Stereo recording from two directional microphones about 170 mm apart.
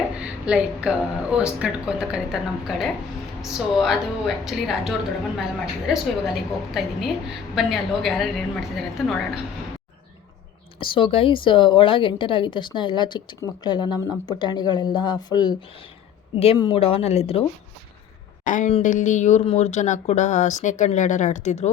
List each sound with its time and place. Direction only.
0.2 s speech: 5° right (ahead or behind)
10.8 s speech: 30° left (ahead or behind)
16.3 s speech: 35° left (ahead or behind)
18.4 s speech: 50° left (ahead or behind)